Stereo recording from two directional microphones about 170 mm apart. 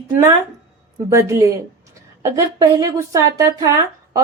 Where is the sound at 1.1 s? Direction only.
15° right (ahead or behind).